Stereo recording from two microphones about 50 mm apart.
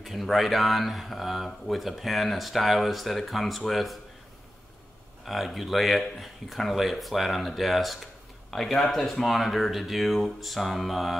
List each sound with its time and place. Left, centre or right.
0.0 s speech: centre
5.2 s speech: centre